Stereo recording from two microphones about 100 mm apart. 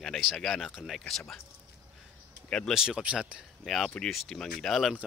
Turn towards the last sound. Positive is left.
turn(degrees=0)  # may be behind; listen again after turning